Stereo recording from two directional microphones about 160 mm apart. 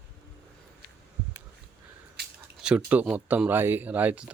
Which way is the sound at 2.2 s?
90° right.